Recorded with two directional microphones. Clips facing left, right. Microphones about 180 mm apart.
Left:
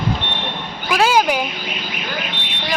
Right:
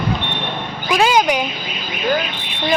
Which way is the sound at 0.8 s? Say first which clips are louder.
Right 1 dB; 5° left (ahead or behind).